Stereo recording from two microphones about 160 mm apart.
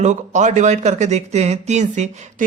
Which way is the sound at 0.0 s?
50° right (ahead or behind).